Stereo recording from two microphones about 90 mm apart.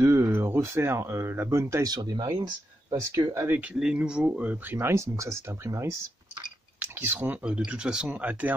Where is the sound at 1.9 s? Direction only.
50° right (ahead or behind).